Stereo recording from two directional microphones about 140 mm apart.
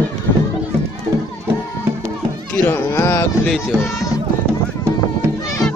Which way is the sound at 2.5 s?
20° left (ahead or behind).